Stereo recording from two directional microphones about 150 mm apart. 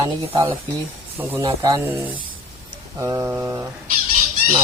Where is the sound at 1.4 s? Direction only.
25° right (ahead or behind).